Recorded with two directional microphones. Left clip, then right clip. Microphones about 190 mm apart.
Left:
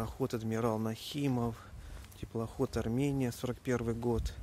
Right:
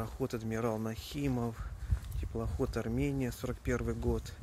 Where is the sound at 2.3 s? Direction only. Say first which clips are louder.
Left 1 dB; 15° left (ahead or behind).